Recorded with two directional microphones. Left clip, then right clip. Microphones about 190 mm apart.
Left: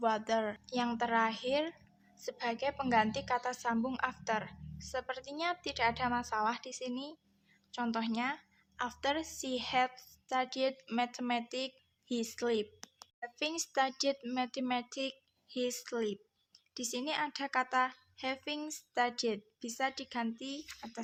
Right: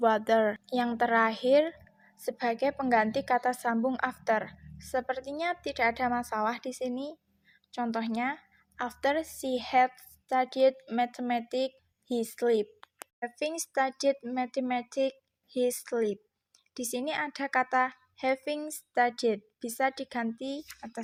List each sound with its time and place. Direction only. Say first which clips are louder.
0.0 s a woman's voice: right 8 dB; 35° right (ahead or behind)
0.7 s a woman's voice: right 6 dB; 25° right (ahead or behind)